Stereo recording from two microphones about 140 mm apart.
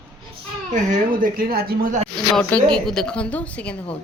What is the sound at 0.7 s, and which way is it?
Speech, 75° right (ahead or behind).